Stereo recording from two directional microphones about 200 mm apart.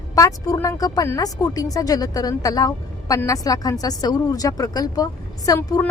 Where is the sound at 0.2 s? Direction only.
15° left (ahead or behind).